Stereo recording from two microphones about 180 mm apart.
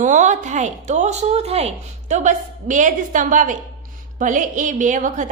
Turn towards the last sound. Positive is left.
turn(degrees=-45)  # may be behind; listen again after turning